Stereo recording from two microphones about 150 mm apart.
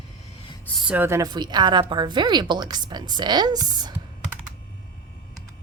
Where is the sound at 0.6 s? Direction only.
Centre (ahead or behind).